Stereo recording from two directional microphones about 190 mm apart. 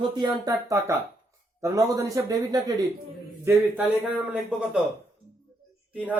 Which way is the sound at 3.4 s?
10° right (ahead or behind).